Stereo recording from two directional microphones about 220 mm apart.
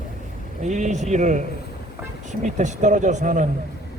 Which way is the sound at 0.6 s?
35° right (ahead or behind).